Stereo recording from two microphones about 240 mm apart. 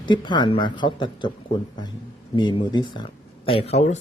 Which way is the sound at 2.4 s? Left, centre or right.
Centre.